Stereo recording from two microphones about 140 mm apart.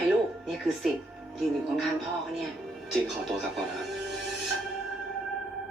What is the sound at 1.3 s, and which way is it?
Speech, centre (ahead or behind).